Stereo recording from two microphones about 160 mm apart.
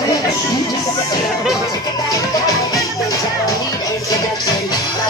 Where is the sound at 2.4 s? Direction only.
20° left (ahead or behind).